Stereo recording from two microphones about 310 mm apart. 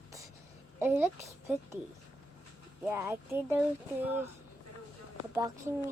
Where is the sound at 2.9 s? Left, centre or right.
Centre.